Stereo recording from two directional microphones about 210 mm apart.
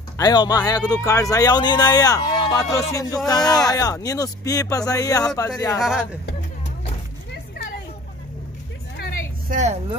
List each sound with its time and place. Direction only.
0.2 s speech: 20° left (ahead or behind)
5.8 s speech: centre (ahead or behind)
9.5 s a woman's voice: 35° right (ahead or behind)